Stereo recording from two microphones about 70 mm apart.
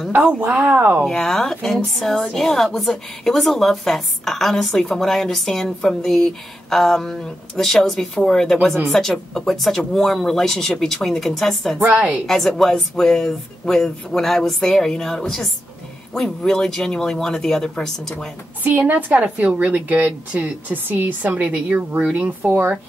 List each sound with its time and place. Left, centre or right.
0.1 s speech: centre
0.4 s a woman's voice: right
1.0 s a woman's voice: centre
11.8 s a woman's voice: right
12.3 s a woman's voice: centre
18.6 s a woman's voice: right